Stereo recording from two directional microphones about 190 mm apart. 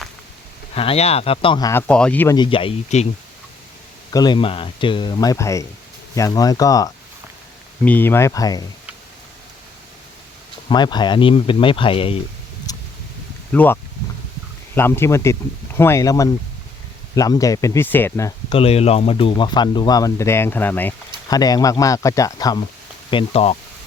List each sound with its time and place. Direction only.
0.7 s speech: 30° left (ahead or behind)
1.9 s speech: 5° left (ahead or behind)
2.3 s speech: 25° left (ahead or behind)
4.1 s speech: 20° left (ahead or behind)
10.7 s speech: 25° left (ahead or behind)
12.7 s a sound: 20° left (ahead or behind)
13.5 s speech: 10° left (ahead or behind)
14.8 s speech: 10° left (ahead or behind)
18.5 s speech: 30° left (ahead or behind)
23.1 s speech: 30° left (ahead or behind)